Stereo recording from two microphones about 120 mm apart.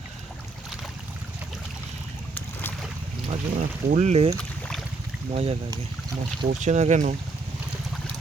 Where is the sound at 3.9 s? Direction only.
70° right (ahead or behind).